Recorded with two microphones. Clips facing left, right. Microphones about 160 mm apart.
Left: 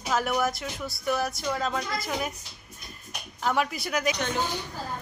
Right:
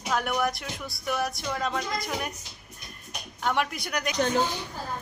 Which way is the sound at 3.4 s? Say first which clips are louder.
Left 1 dB; centre (ahead or behind).